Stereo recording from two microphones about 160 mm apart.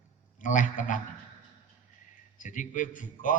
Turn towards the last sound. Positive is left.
turn(degrees=55)  # may be behind; listen again after turning